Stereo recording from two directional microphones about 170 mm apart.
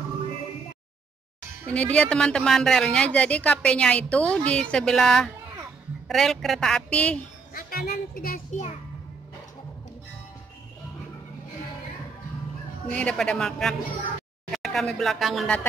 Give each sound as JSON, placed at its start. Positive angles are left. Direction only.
{"t": 1.7, "sound": "a woman's voice", "side_deg": 5}
{"t": 7.5, "sound": "a child's voice", "side_deg": 65}
{"t": 12.9, "sound": "a woman's voice", "side_deg": 5}